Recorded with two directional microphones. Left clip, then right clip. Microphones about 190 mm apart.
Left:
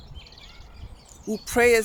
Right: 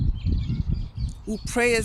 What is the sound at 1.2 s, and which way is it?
Speech, 10° right (ahead or behind).